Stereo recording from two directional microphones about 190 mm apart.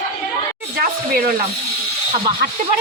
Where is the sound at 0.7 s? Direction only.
55° right (ahead or behind).